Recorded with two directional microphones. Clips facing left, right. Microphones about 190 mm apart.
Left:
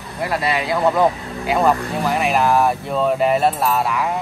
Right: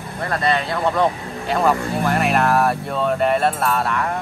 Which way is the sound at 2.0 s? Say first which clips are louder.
Left 1 dB; centre (ahead or behind).